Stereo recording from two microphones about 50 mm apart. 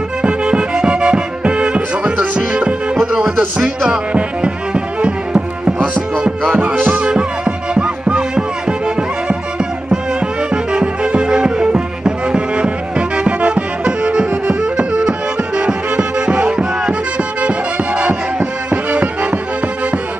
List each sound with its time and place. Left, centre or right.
0.2 s music: right
3.1 s music: centre
6.7 s music: right
7.1 s music: centre